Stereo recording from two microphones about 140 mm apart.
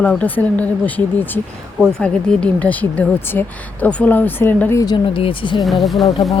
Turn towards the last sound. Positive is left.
turn(degrees=0)  # may be behind; listen again after turning